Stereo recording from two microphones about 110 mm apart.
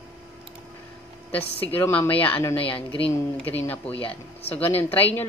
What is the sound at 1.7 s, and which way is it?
Speech, 20° left (ahead or behind).